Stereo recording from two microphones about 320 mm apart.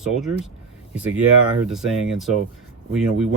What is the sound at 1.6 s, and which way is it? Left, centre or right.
Speech, centre.